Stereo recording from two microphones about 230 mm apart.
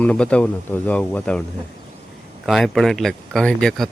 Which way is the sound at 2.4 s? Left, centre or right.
Centre.